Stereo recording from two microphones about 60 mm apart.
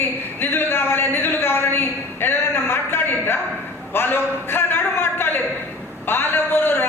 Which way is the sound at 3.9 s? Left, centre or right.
Left.